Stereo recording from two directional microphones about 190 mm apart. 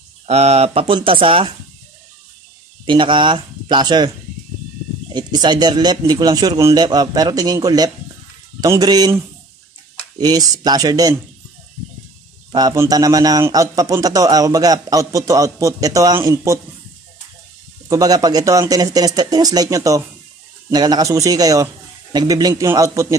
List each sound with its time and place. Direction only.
0.3 s a man's voice: 35° right (ahead or behind)
2.8 s a man's voice: 25° right (ahead or behind)
5.1 s a man's voice: 25° right (ahead or behind)
12.5 s a man's voice: 20° right (ahead or behind)
17.8 s a man's voice: 20° right (ahead or behind)